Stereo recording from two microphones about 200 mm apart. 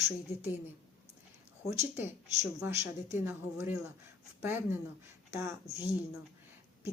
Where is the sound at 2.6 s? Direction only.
10° right (ahead or behind).